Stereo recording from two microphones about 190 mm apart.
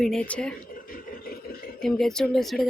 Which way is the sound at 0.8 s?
50° left (ahead or behind).